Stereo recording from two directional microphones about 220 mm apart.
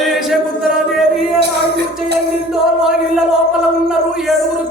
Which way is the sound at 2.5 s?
Centre (ahead or behind).